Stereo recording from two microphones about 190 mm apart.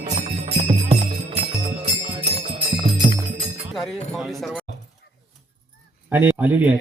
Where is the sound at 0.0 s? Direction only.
35° right (ahead or behind).